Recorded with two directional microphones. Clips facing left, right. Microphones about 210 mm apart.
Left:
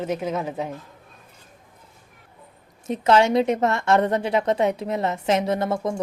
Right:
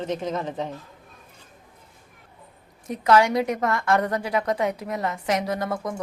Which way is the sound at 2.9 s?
25° left (ahead or behind).